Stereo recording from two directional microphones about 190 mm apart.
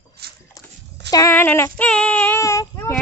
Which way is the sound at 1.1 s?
15° left (ahead or behind).